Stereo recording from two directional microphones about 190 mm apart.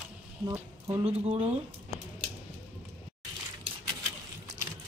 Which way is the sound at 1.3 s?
35° right (ahead or behind).